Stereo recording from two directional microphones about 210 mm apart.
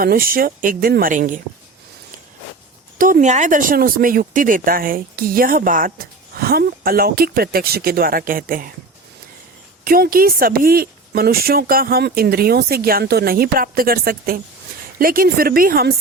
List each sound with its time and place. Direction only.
0.0 s speech: 45° right (ahead or behind)
3.0 s speech: 40° right (ahead or behind)
9.8 s speech: 45° right (ahead or behind)